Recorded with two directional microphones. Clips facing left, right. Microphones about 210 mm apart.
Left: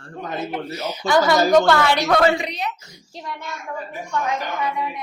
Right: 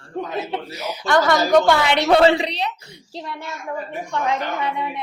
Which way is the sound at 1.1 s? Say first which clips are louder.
Left 1 dB; centre (ahead or behind).